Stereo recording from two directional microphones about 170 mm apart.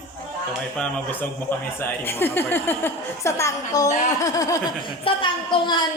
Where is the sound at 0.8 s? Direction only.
10° left (ahead or behind); by 5.7 s 30° left (ahead or behind).